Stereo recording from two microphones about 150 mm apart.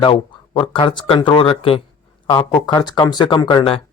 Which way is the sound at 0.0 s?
35° left (ahead or behind).